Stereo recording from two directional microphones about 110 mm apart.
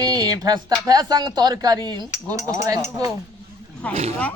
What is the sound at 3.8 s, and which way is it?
Speech, 10° left (ahead or behind).